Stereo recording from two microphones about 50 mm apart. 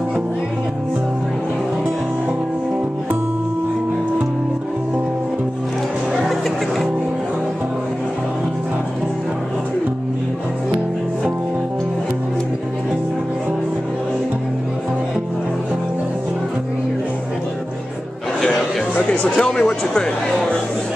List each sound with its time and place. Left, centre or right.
19.0 s speech: centre